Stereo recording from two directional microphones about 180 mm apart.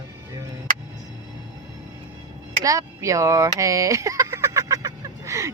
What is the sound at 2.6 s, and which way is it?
Speech, 20° right (ahead or behind).